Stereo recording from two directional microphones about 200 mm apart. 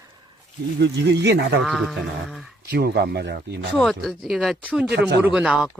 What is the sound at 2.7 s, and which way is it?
Speech, 55° right (ahead or behind).